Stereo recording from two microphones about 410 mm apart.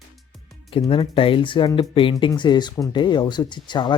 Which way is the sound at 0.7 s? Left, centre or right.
Centre.